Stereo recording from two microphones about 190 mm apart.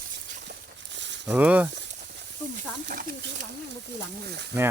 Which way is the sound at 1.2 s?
5° right (ahead or behind).